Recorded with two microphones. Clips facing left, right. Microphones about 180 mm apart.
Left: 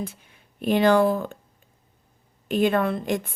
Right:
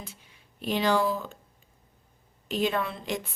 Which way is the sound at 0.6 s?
55° left (ahead or behind).